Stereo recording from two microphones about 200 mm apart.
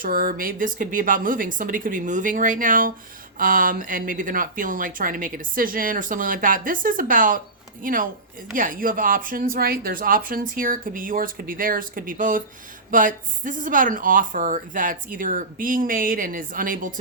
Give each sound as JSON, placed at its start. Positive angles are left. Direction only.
{"t": 0.0, "sound": "speech", "side_deg": -45}